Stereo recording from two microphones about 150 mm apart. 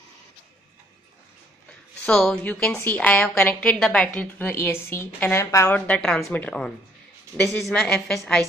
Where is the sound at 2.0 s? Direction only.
5° left (ahead or behind).